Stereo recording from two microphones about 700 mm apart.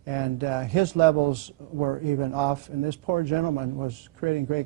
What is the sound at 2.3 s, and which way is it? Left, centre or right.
Speech, right.